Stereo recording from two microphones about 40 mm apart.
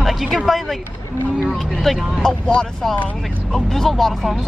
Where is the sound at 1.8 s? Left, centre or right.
Centre.